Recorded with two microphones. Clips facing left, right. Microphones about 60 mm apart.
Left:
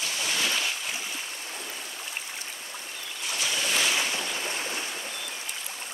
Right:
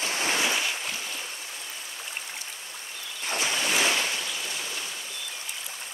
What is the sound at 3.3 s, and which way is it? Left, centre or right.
Boat, right.